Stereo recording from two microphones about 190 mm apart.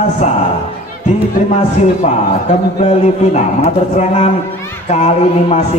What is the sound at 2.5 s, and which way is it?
Speech, 35° left (ahead or behind).